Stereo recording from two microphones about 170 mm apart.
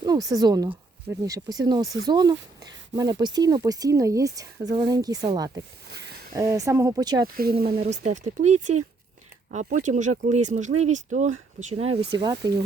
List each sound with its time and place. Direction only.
0.0 s speech: 20° right (ahead or behind)
6.3 s speech: 20° right (ahead or behind)
7.3 s speech: 60° right (ahead or behind)
8.0 s speech: 45° right (ahead or behind)
12.1 s speech: 25° right (ahead or behind)